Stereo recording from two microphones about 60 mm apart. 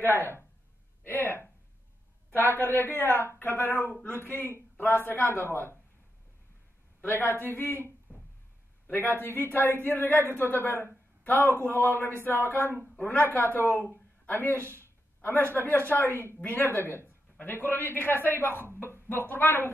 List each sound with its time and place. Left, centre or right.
0.1 s speech: left
2.5 s speech: left
7.0 s speech: left
16.1 s a woman's voice: right
16.4 s speech: left